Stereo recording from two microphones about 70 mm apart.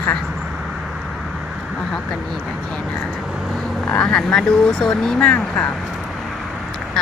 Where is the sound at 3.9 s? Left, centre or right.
Centre.